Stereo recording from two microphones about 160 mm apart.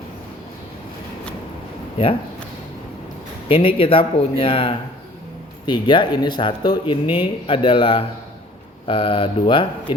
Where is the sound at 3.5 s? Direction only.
35° left (ahead or behind).